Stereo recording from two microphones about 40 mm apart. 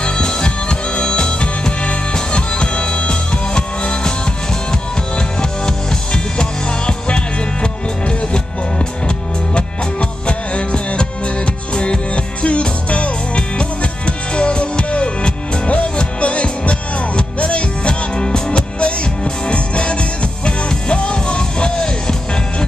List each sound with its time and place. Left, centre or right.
0.0 s music: left
5.4 s music: centre
7.6 s music: left